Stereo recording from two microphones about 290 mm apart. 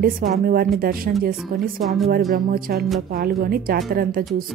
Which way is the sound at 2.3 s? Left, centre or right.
Right.